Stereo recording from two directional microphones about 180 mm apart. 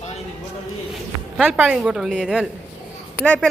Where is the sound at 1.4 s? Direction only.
10° right (ahead or behind).